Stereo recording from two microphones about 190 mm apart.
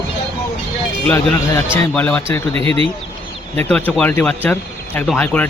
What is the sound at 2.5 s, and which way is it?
Speech, 30° right (ahead or behind).